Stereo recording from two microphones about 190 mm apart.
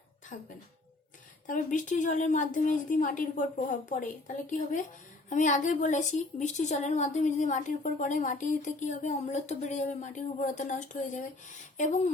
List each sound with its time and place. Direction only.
0.3 s a woman's voice: 45° left (ahead or behind)